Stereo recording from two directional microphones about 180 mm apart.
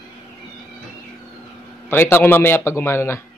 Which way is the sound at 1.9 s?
15° left (ahead or behind).